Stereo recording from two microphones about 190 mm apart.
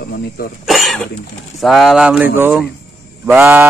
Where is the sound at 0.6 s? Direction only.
Centre (ahead or behind).